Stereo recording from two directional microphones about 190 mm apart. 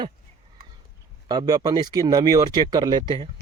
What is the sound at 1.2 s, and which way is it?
Speech, 25° right (ahead or behind).